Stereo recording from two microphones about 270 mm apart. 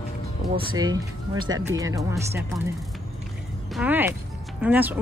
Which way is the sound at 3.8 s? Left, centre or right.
Centre.